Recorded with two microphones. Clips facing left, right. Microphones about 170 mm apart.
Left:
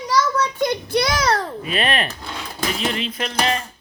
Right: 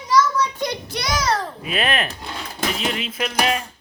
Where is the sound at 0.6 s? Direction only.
55° left (ahead or behind).